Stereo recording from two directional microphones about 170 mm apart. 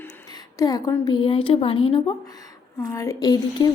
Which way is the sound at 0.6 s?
20° left (ahead or behind).